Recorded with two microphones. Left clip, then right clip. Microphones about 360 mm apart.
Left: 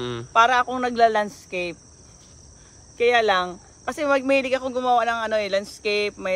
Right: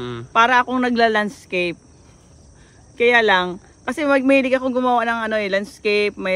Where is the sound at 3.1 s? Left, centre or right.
Right.